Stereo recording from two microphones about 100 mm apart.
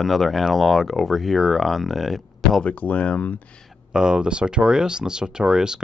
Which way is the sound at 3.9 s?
10° right (ahead or behind).